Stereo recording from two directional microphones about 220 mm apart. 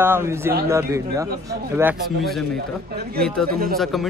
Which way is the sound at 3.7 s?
Centre (ahead or behind).